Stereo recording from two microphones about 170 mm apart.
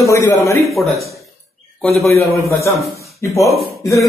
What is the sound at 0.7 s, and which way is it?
Speech, centre (ahead or behind).